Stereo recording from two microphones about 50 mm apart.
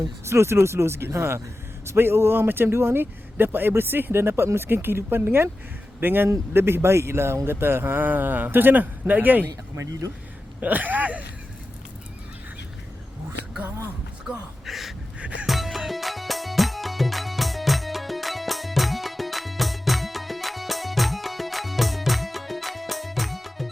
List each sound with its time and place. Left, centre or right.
0.3 s speech: right
8.0 s speech: right
10.6 s speech: right
14.3 s a sound: centre
15.4 s music: centre